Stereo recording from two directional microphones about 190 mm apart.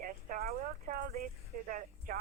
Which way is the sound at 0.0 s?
50° right (ahead or behind).